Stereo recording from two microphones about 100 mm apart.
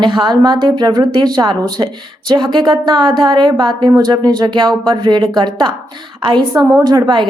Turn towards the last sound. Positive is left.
turn(degrees=-50)  # may be behind; listen again after turning